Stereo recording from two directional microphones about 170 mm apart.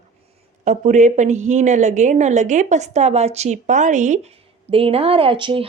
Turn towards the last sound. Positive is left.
turn(degrees=-30)  # may be behind; listen again after turning